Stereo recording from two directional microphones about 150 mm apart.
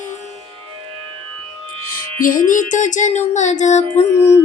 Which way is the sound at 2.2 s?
65° left (ahead or behind).